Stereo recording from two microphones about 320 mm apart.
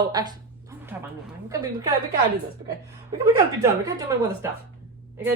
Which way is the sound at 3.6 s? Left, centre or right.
Centre.